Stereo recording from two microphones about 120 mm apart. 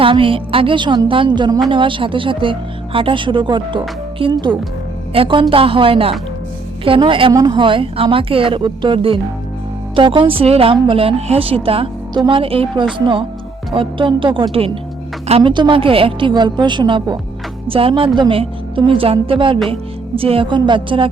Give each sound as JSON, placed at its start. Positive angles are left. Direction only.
{"t": 0.0, "sound": "speech", "side_deg": -45}
{"t": 12.1, "sound": "speech", "side_deg": -35}
{"t": 12.4, "sound": "a woman's voice", "side_deg": -50}